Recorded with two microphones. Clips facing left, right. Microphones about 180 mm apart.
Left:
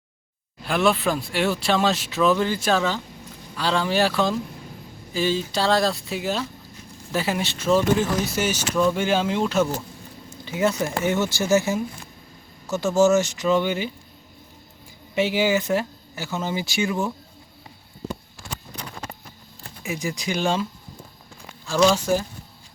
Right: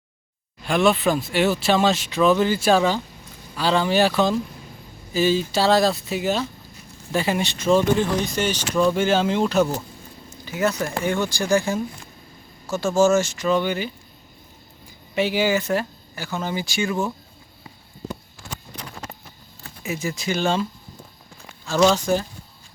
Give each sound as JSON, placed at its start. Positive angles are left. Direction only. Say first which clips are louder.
{"t": 0.6, "sound": "speech", "louder": "right 2 dB", "side_deg": 0}
{"t": 10.2, "sound": "a sound", "louder": "even", "side_deg": 25}
{"t": 10.8, "sound": "speech", "louder": "left 1 dB", "side_deg": 20}
{"t": 15.1, "sound": "speech", "louder": "even", "side_deg": 20}
{"t": 19.8, "sound": "speech", "louder": "right 1 dB", "side_deg": 15}
{"t": 21.9, "sound": "speech", "louder": "right 1 dB", "side_deg": 5}